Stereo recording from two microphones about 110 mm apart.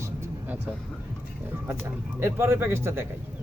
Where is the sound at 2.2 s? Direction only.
20° right (ahead or behind).